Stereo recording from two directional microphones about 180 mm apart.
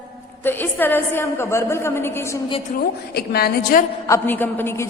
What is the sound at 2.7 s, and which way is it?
A woman's voice, 60° left (ahead or behind).